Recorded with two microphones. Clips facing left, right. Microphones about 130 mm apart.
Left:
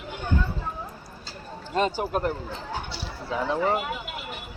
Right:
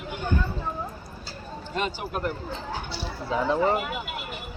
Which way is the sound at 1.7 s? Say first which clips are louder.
Left 5 dB; 35° left (ahead or behind).